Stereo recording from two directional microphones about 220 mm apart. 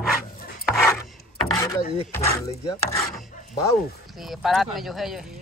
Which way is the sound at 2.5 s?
15° left (ahead or behind).